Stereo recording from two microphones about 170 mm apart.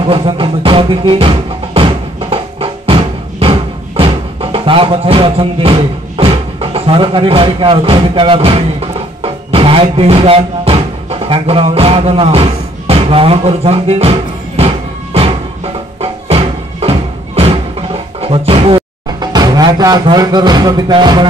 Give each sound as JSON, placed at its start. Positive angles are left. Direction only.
{"t": 0.0, "sound": "music", "side_deg": -30}
{"t": 9.2, "sound": "speech", "side_deg": -35}
{"t": 15.1, "sound": "music", "side_deg": -35}
{"t": 18.2, "sound": "speech", "side_deg": -35}